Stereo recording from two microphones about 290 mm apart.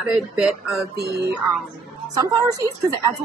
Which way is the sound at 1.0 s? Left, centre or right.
Right.